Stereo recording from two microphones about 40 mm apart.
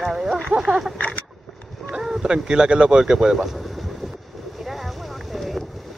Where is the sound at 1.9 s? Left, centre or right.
Centre.